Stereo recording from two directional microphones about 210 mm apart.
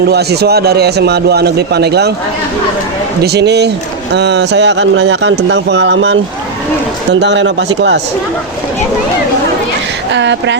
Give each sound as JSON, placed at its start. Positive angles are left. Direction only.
{"t": 0.1, "sound": "a man's voice", "side_deg": -50}
{"t": 3.2, "sound": "a man's voice", "side_deg": -50}
{"t": 10.1, "sound": "speech", "side_deg": -60}